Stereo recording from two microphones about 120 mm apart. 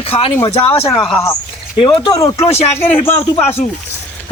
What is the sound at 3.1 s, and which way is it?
Speech, 60° left (ahead or behind).